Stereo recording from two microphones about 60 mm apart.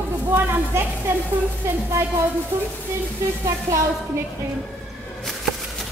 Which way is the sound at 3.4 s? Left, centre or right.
Right.